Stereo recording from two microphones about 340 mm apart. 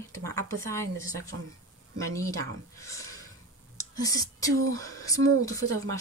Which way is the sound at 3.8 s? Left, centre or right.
Centre.